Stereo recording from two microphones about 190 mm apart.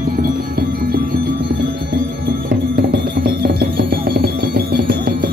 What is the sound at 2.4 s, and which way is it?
Music, 60° right (ahead or behind).